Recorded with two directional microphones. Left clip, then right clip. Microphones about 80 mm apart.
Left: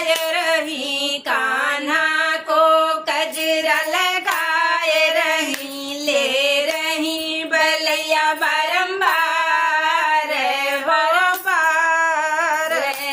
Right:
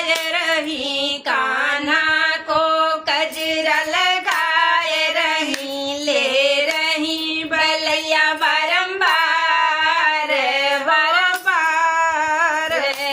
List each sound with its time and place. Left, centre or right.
0.1 s female singing: left
2.1 s music: left
11.4 s female singing: left
11.9 s music: left